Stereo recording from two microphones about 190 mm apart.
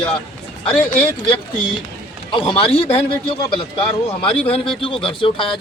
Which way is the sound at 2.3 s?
30° left (ahead or behind).